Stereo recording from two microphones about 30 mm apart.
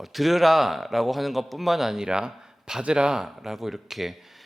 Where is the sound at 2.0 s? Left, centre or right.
Right.